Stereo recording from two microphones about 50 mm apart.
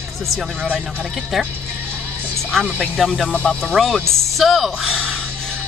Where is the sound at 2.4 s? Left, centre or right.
Centre.